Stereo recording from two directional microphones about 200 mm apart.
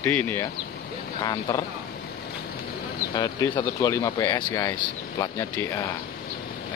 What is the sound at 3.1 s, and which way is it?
Speech, 20° left (ahead or behind).